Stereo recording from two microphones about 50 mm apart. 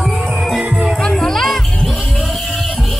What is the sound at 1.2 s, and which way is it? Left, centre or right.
Music, centre.